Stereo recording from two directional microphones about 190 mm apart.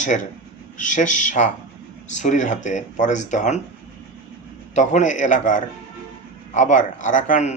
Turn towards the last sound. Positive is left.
turn(degrees=40)  # may be behind; listen again after turning